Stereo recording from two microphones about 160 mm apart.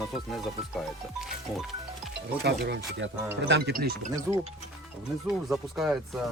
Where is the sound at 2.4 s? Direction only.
90° right.